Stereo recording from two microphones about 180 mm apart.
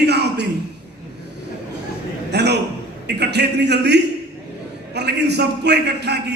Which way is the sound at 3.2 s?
70° right (ahead or behind).